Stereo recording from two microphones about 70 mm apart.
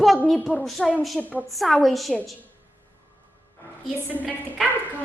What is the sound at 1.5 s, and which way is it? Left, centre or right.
Speech, centre.